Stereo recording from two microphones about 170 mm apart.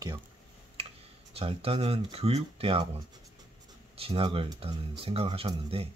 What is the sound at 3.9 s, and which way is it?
Speech, 35° right (ahead or behind).